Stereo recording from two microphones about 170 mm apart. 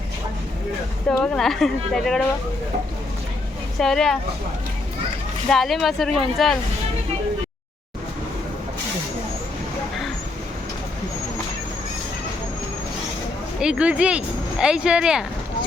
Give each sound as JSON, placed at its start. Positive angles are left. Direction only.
{"t": 1.2, "sound": "speech", "side_deg": 5}
{"t": 3.8, "sound": "speech", "side_deg": 0}
{"t": 5.5, "sound": "speech", "side_deg": 0}
{"t": 13.6, "sound": "speech", "side_deg": -5}